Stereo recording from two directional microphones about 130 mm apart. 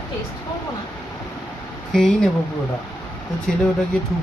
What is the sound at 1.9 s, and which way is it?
Speech, centre (ahead or behind).